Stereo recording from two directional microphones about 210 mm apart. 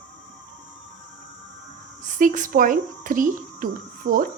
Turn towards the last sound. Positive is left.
turn(degrees=-50)  # may be behind; listen again after turning